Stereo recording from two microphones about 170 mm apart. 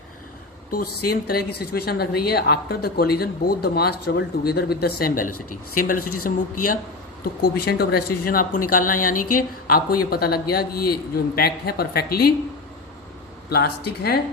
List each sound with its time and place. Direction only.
0.7 s a woman's voice: 60° left (ahead or behind)
13.5 s speech: 70° left (ahead or behind)